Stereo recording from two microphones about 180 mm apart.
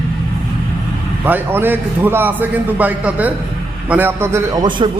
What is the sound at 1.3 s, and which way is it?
A man's voice, 10° right (ahead or behind).